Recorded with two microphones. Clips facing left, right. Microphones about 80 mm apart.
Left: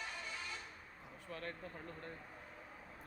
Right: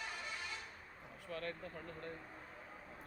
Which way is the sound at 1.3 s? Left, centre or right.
Left.